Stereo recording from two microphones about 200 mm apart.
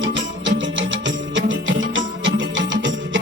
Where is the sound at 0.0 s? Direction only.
70° right (ahead or behind).